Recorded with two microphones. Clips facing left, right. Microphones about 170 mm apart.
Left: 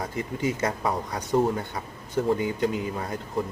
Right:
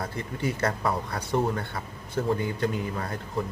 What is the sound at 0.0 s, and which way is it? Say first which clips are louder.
A man's voice: left 2 dB; 15° left (ahead or behind).